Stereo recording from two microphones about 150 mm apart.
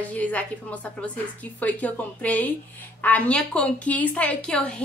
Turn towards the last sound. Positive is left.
turn(degrees=5)  # may be behind; listen again after turning